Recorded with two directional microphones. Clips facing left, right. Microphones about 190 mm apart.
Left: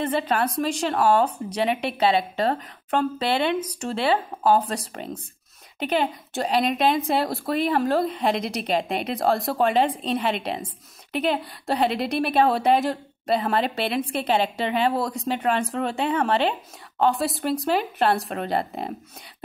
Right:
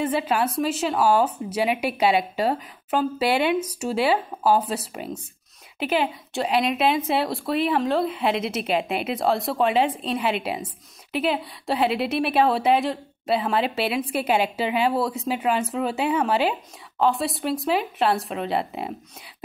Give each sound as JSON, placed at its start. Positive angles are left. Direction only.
{"t": 0.0, "sound": "a woman's voice", "side_deg": -10}
{"t": 6.5, "sound": "a woman's voice", "side_deg": 40}
{"t": 7.1, "sound": "a woman's voice", "side_deg": 0}